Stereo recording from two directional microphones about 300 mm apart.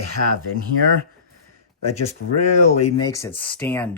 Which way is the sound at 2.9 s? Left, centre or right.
Centre.